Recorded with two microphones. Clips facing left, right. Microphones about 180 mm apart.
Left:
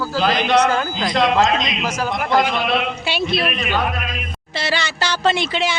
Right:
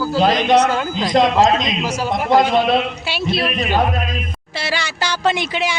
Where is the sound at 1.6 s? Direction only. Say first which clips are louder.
Right 2 dB; 25° right (ahead or behind).